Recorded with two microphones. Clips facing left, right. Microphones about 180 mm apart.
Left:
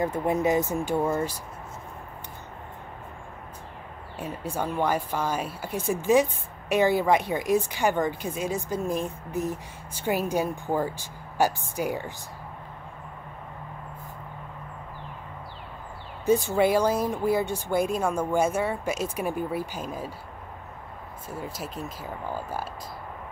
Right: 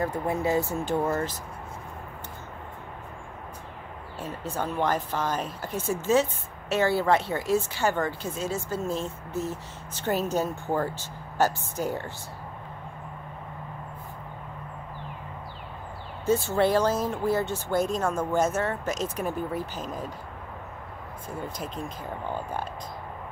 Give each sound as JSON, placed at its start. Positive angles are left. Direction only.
{"t": 0.0, "sound": "a woman's voice", "side_deg": 20}
{"t": 4.2, "sound": "a woman's voice", "side_deg": 10}
{"t": 16.3, "sound": "a woman's voice", "side_deg": 15}
{"t": 21.3, "sound": "speech", "side_deg": 5}